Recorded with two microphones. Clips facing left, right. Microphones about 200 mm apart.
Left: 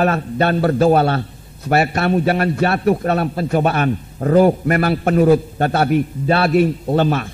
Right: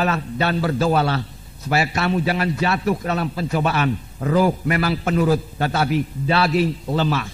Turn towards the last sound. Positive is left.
turn(degrees=55)  # may be behind; listen again after turning